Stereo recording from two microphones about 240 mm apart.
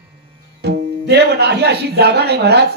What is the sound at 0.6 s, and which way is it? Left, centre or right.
Speech, right.